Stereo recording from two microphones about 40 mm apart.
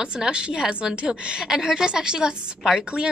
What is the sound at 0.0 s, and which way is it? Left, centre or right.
A woman's voice, right.